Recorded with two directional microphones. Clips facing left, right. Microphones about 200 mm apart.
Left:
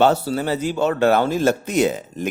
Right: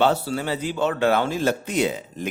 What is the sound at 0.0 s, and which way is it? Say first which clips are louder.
Speech: left 4 dB; 40° left (ahead or behind).